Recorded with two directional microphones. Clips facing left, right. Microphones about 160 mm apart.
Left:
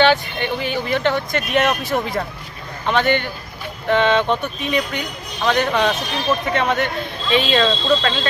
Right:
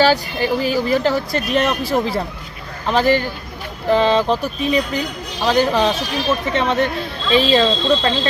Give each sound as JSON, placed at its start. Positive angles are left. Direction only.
{"t": 0.0, "sound": "speech", "side_deg": -35}